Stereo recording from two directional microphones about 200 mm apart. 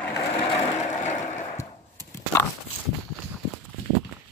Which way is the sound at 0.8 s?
35° left (ahead or behind).